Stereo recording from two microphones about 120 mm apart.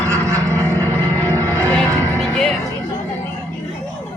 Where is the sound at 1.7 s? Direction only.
5° left (ahead or behind).